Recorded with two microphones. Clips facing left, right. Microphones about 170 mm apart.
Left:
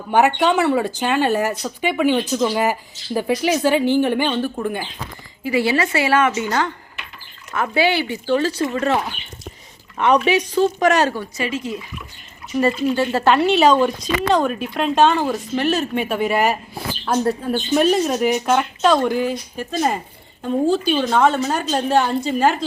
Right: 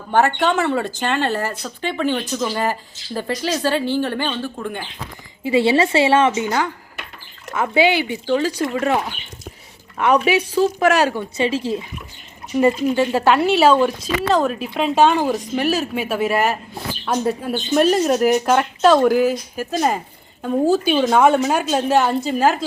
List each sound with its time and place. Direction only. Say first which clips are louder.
0.1 s speech: left 1 dB; 15° left (ahead or behind)
5.4 s a woman's voice: right 3 dB; 25° right (ahead or behind)
10.0 s a woman's voice: even; 10° right (ahead or behind)
11.3 s a woman's voice: right 4 dB; 30° right (ahead or behind); by 16.8 s centre (ahead or behind)
17.1 s a woman's voice: left 1 dB; 10° right (ahead or behind)
17.5 s a woman's voice: right 1 dB; centre (ahead or behind)